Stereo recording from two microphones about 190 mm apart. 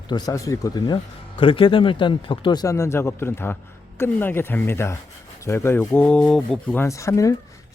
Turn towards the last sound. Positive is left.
turn(degrees=15)  # may be behind; listen again after turning